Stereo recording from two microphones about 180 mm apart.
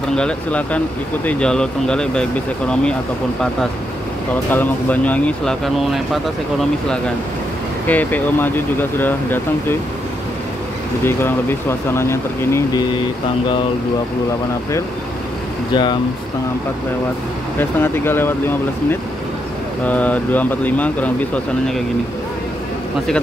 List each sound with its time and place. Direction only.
0.1 s speech: 5° left (ahead or behind)
4.5 s speech: 10° left (ahead or behind)
7.9 s speech: 10° left (ahead or behind)
11.1 s speech: 10° left (ahead or behind)
15.7 s speech: 25° left (ahead or behind)
17.6 s speech: 10° left (ahead or behind)
19.9 s speech: 10° left (ahead or behind)